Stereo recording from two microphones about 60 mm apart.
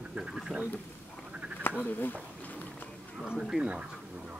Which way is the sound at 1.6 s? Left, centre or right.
Left.